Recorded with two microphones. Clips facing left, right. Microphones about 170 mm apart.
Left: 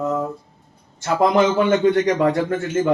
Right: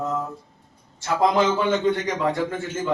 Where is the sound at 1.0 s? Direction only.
65° left (ahead or behind).